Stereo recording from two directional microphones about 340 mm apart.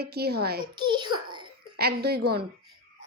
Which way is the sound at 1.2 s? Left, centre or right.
Centre.